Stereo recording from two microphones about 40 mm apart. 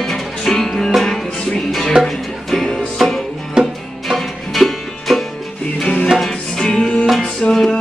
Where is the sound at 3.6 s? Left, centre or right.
Right.